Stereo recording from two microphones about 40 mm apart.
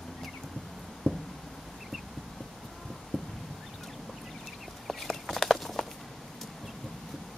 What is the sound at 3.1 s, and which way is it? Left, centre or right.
Fowl, centre.